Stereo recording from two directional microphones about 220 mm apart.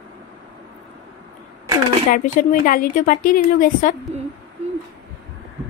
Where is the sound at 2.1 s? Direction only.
40° left (ahead or behind).